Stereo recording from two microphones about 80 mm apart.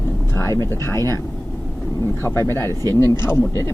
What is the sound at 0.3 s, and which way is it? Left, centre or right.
Speech, left.